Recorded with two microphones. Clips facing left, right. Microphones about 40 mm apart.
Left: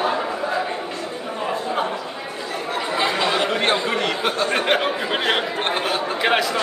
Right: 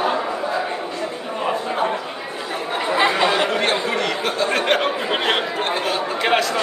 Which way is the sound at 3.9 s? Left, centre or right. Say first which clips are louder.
Even; centre.